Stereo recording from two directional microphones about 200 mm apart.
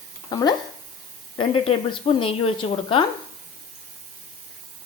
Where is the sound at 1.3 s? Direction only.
25° left (ahead or behind).